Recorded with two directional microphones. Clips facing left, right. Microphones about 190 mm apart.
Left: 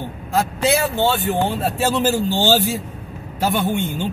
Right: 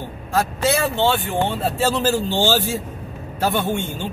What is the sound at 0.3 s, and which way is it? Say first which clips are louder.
A man's voice: left 1 dB; 15° left (ahead or behind).